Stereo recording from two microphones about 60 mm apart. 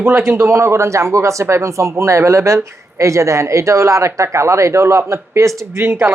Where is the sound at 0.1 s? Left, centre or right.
Right.